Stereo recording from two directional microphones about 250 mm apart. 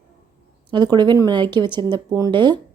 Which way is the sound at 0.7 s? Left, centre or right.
Centre.